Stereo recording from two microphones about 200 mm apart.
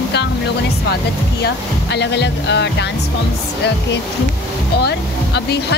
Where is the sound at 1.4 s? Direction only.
55° left (ahead or behind).